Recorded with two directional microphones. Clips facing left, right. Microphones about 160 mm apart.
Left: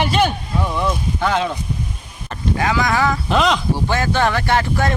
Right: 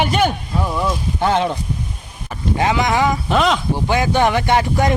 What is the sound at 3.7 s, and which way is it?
Speech, 15° right (ahead or behind).